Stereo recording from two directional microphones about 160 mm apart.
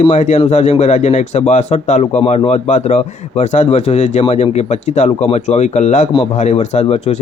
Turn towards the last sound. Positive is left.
turn(degrees=40)  # may be behind; listen again after turning